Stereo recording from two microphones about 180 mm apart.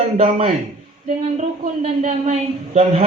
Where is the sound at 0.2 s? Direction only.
35° right (ahead or behind).